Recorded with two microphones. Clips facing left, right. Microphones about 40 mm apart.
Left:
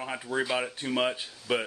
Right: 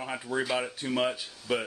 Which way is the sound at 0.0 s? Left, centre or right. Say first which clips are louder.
Left 1 dB; centre.